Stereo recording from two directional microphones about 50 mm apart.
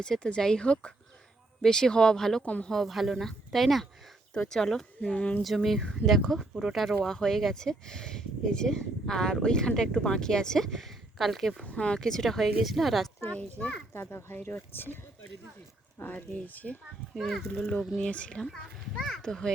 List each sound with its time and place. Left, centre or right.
0.0 s speech: centre
2.4 s speech: left
2.6 s speech: centre
4.9 s speech: left
5.4 s speech: centre
6.5 s speech: centre
11.8 s speech: centre
13.6 s speech: centre
13.9 s a child's voice: left
16.0 s speech: left
17.2 s speech: centre
18.0 s speech: left
19.0 s speech: centre